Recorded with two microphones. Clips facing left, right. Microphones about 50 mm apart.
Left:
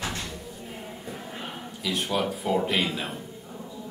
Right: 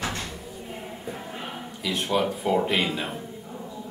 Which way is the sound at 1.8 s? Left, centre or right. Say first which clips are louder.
Right 2 dB; centre.